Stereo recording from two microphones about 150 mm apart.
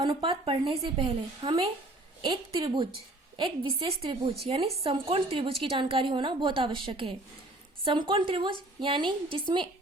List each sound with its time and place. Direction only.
0.0 s a woman's voice: 35° right (ahead or behind)